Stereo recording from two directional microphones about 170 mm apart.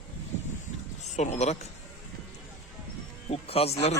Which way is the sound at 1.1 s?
40° left (ahead or behind).